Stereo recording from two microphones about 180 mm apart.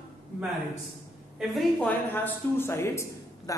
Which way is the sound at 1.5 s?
5° left (ahead or behind).